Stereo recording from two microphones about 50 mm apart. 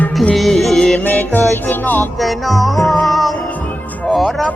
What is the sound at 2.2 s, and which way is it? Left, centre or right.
Music, centre.